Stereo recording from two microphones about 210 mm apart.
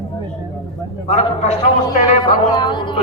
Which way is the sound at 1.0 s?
30° left (ahead or behind).